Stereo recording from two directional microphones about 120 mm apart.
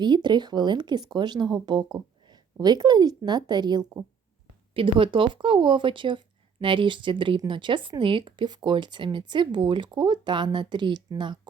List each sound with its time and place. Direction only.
0.0 s a woman's voice: 40° right (ahead or behind)
4.7 s speech: 45° right (ahead or behind)